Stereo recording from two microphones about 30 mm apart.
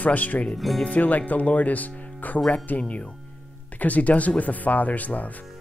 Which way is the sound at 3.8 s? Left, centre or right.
Left.